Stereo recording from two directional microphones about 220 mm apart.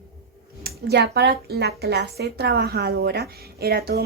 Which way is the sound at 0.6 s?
50° right (ahead or behind).